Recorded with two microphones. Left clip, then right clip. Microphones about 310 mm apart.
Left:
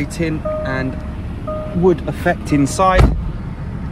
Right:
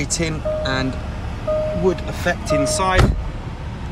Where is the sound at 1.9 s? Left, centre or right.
Centre.